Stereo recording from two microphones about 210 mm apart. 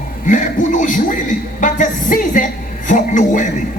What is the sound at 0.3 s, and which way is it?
A man's voice, 40° left (ahead or behind).